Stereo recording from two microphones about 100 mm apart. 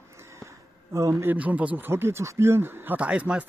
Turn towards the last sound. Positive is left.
turn(degrees=-10)  # may be behind; listen again after turning